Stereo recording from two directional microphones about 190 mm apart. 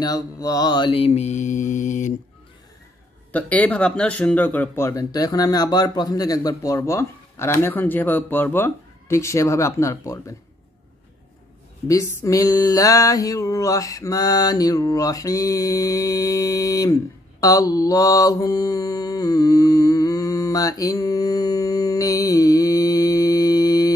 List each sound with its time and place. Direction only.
0.0 s mantra: 20° left (ahead or behind); by 2.1 s 40° left (ahead or behind)
3.3 s speech: 10° left (ahead or behind)
11.9 s a sound: 15° left (ahead or behind)